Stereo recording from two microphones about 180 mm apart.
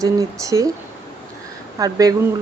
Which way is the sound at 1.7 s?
20° right (ahead or behind).